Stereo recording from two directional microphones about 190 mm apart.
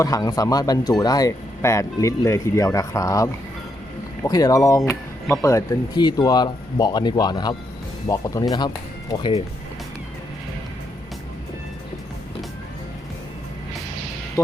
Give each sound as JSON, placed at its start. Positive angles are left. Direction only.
{"t": 0.0, "sound": "speech", "side_deg": 20}
{"t": 14.4, "sound": "speech", "side_deg": 15}